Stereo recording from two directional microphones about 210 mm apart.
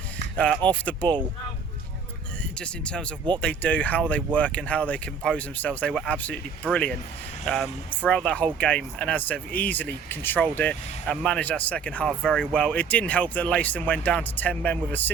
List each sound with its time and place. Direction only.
0.7 s speech: 5° left (ahead or behind)
2.4 s speech: 5° left (ahead or behind)